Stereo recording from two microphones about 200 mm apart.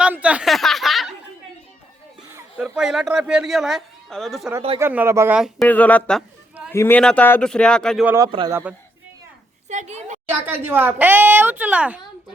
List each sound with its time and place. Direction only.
0.0 s a sound: 5° right (ahead or behind)
2.6 s speech: 5° right (ahead or behind)
4.8 s speech: 10° right (ahead or behind)
5.6 s speech: 5° left (ahead or behind)
8.0 s speech: 15° right (ahead or behind)
8.3 s a man's voice: 25° right (ahead or behind)
9.6 s a woman's voice: 35° right (ahead or behind)
10.2 s speech: 10° right (ahead or behind)